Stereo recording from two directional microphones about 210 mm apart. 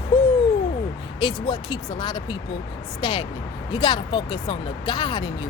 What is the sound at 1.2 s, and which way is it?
Speech, 20° left (ahead or behind).